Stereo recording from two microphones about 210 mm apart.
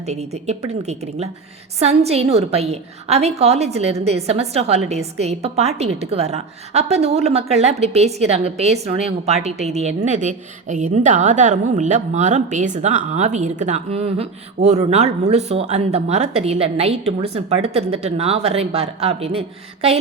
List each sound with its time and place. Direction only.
0.0 s a woman's voice: 30° right (ahead or behind)